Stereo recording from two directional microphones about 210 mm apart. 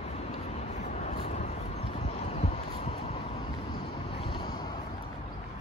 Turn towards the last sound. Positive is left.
turn(degrees=20)  # may be behind; listen again after turning